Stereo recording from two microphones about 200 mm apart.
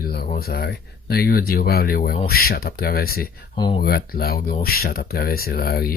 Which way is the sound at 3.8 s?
50° left (ahead or behind).